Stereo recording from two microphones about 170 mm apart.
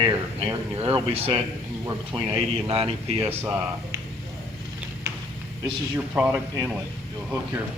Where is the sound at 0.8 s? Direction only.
35° right (ahead or behind).